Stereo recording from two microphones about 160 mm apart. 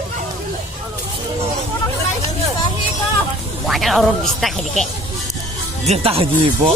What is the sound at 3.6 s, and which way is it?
Speech, centre (ahead or behind).